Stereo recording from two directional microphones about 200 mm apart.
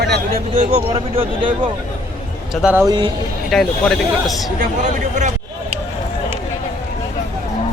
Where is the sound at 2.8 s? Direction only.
20° right (ahead or behind).